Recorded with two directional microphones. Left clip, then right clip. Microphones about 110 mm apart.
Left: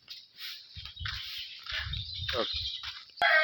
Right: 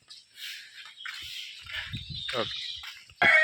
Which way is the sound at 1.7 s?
10° right (ahead or behind).